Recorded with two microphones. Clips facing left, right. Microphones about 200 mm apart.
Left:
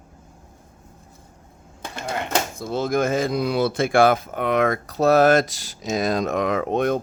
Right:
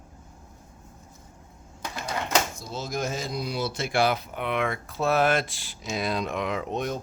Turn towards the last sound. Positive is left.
turn(degrees=60)  # may be behind; listen again after turning